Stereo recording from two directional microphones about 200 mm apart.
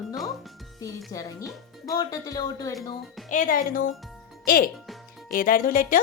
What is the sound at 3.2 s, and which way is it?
Speech, 40° left (ahead or behind).